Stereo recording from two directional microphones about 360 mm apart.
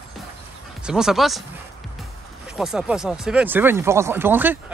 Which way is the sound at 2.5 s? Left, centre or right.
Centre.